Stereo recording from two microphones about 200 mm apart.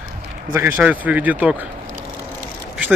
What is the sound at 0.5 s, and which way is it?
Speech, 10° right (ahead or behind).